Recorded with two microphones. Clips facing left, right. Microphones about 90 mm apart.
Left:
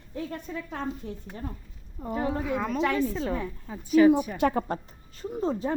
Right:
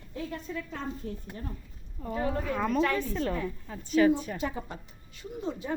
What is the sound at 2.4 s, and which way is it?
A woman's voice, 5° left (ahead or behind).